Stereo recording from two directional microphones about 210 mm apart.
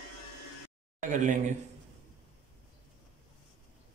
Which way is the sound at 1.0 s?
35° right (ahead or behind).